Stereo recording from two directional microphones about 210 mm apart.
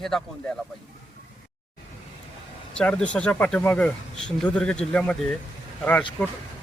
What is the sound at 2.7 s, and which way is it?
Speech, 5° left (ahead or behind).